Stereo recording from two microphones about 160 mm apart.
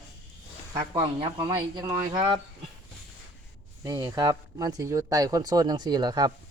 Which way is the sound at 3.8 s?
20° right (ahead or behind).